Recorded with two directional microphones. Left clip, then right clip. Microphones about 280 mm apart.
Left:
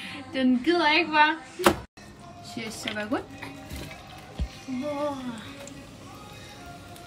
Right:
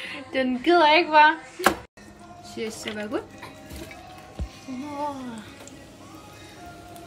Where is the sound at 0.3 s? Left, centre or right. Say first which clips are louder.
Right 2 dB; right.